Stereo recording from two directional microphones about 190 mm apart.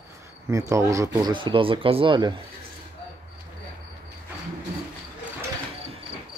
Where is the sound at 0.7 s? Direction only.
15° right (ahead or behind).